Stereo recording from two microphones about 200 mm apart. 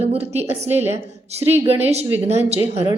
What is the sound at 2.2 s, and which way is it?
Speech, 30° right (ahead or behind).